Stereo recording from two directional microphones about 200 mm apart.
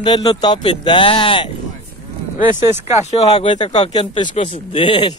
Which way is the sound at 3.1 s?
30° left (ahead or behind).